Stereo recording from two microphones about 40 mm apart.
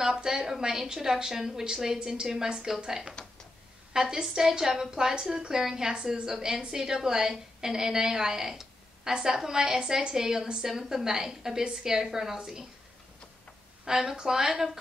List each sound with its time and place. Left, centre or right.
0.0 s a woman's voice: centre
13.8 s a woman's voice: centre